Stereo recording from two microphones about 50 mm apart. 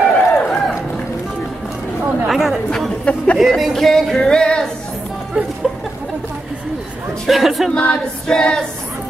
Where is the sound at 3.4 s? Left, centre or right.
Centre.